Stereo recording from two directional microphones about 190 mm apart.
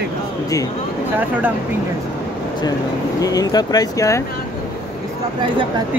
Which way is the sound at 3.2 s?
20° left (ahead or behind).